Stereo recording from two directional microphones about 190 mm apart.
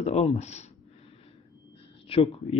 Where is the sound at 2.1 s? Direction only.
30° left (ahead or behind).